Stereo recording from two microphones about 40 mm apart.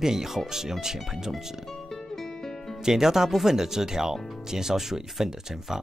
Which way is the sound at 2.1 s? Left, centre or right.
Centre.